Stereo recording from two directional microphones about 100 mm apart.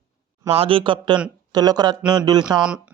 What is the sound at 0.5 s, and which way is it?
A man's voice, 65° right (ahead or behind).